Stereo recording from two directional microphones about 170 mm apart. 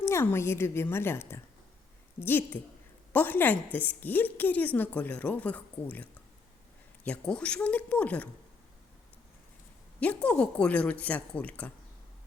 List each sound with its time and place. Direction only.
0.0 s a woman's voice: 15° left (ahead or behind)
10.0 s a woman's voice: 10° left (ahead or behind)